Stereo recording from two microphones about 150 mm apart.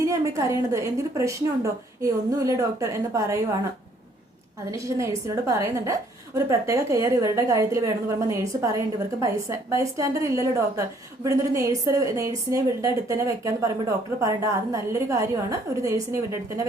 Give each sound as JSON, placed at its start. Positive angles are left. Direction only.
{"t": 0.0, "sound": "a woman's voice", "side_deg": -20}
{"t": 4.7, "sound": "a woman's voice", "side_deg": -20}